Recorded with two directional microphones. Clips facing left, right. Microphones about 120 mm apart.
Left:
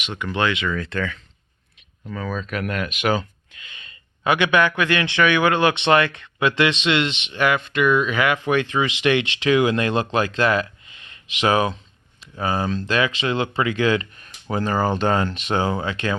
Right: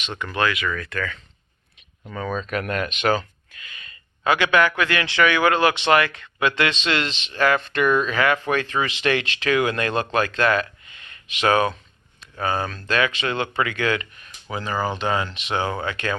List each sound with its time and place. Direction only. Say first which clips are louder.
0.0 s speech: left 2 dB; 10° left (ahead or behind)
0.3 s speech: left 1 dB; 25° left (ahead or behind)
2.0 s speech: right 1 dB; centre (ahead or behind); by 14.1 s 25° left (ahead or behind)
14.5 s speech: left 4 dB; 45° left (ahead or behind)
15.6 s speech: left 2 dB; 25° left (ahead or behind)